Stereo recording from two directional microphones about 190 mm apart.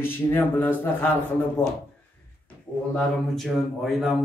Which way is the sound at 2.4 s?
5° left (ahead or behind).